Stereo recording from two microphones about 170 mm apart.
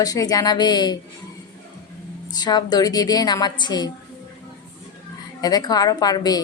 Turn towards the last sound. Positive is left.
turn(degrees=20)  # may be behind; listen again after turning